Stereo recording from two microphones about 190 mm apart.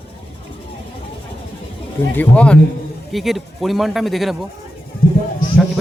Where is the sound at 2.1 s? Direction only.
5° left (ahead or behind).